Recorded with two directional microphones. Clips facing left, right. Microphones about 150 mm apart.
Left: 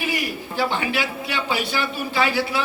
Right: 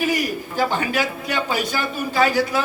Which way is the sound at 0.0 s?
45° right (ahead or behind).